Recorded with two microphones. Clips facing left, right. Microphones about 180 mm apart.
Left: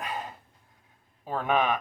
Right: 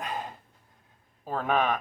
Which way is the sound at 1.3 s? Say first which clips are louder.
Left 1 dB; 10° left (ahead or behind).